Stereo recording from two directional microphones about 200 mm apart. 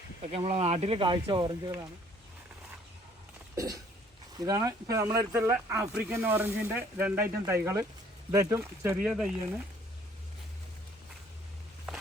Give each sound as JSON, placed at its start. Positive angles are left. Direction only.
{"t": 0.3, "sound": "speech", "side_deg": -30}
{"t": 3.5, "sound": "a sound", "side_deg": -15}
{"t": 4.4, "sound": "speech", "side_deg": -20}